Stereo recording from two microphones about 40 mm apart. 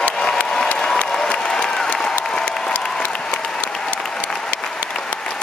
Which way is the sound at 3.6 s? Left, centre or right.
Centre.